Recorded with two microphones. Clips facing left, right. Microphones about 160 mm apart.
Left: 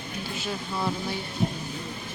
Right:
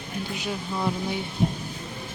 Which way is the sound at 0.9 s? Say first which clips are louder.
Right 3 dB; 15° right (ahead or behind).